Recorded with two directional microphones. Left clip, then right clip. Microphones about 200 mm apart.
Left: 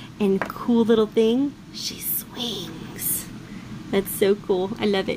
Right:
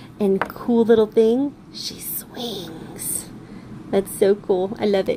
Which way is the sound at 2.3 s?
20° left (ahead or behind).